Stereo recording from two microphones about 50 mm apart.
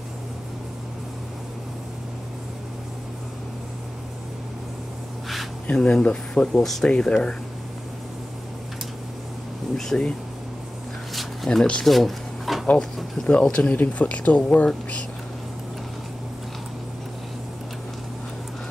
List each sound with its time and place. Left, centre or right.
5.8 s speech: centre
6.6 s speech: centre
6.9 s speech: centre
9.8 s speech: centre
11.1 s a sound: centre
12.7 s speech: centre
13.3 s speech: left